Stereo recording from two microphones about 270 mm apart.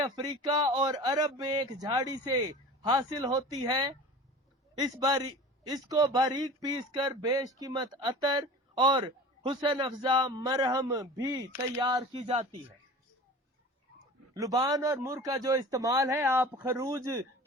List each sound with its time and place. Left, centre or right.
0.0 s a man's voice: centre
14.3 s a man's voice: centre